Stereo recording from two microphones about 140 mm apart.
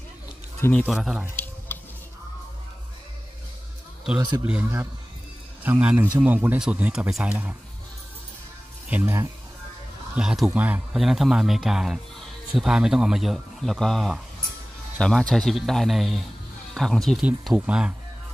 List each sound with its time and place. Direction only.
0.6 s speech: 10° left (ahead or behind)
0.8 s a man's voice: centre (ahead or behind)
1.2 s a sound: 15° left (ahead or behind)
4.2 s a man's voice: 30° right (ahead or behind)
4.5 s a man's voice: 15° right (ahead or behind)
8.8 s speech: 15° right (ahead or behind)
10.1 s a man's voice: 5° right (ahead or behind)